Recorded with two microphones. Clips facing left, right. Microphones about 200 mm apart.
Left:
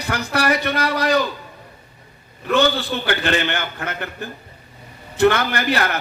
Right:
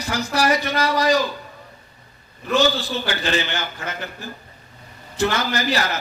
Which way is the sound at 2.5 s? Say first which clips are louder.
Left 1 dB; 60° left (ahead or behind).